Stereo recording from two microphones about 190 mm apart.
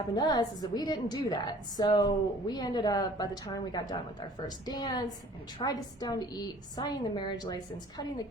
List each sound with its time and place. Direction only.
0.2 s a woman's voice: 20° left (ahead or behind)